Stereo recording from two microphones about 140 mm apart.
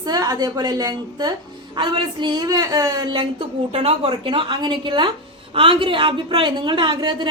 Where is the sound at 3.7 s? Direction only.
45° right (ahead or behind).